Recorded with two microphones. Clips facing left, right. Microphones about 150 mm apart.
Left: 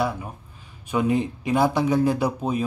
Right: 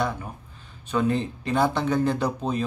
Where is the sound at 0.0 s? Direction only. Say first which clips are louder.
Left 2 dB; 5° left (ahead or behind).